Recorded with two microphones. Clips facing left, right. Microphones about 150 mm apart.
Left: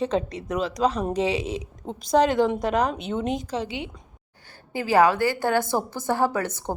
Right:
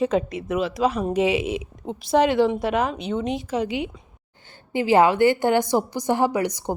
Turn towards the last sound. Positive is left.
turn(degrees=-15)  # may be behind; listen again after turning